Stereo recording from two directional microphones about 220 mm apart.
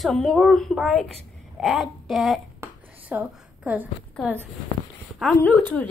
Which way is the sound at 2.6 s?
10° right (ahead or behind).